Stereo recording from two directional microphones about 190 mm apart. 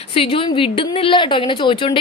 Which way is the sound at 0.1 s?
30° left (ahead or behind).